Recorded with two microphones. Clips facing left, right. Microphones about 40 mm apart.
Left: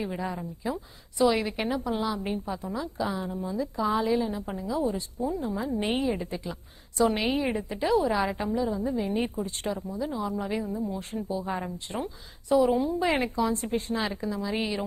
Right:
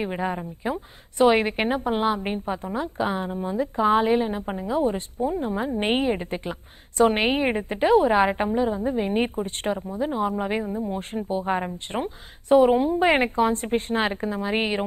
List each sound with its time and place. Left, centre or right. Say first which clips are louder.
0.0 s a woman's voice: right 5 dB; right